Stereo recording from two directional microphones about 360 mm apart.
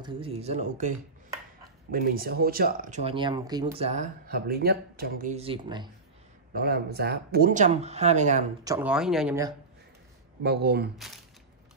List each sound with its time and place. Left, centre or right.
0.0 s speech: centre
6.5 s speech: right
8.7 s speech: centre
10.4 s speech: right